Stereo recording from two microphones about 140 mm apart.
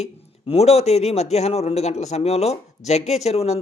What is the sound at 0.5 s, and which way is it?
Speech, 50° left (ahead or behind).